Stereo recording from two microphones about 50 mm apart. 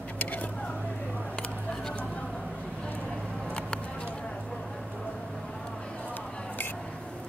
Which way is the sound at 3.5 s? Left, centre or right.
Left.